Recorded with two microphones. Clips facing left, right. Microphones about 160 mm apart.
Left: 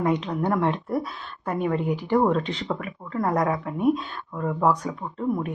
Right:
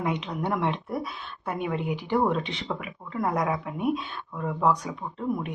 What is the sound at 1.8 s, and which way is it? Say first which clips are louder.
Speech: left 4 dB; 40° left (ahead or behind).